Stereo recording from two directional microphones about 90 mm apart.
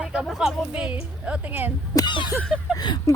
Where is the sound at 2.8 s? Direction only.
55° left (ahead or behind).